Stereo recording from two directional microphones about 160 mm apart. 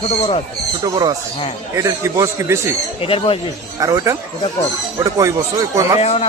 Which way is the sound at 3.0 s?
35° left (ahead or behind).